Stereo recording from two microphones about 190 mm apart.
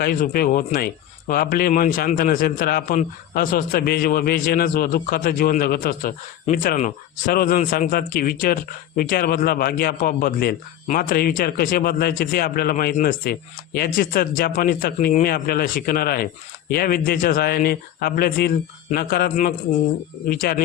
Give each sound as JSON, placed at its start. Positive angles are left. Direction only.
{"t": 0.0, "sound": "speech", "side_deg": 50}